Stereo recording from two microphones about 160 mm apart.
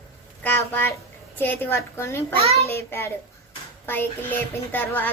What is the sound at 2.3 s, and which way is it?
Speech, 40° right (ahead or behind).